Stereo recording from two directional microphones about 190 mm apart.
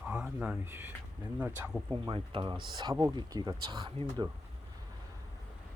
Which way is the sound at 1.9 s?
25° right (ahead or behind).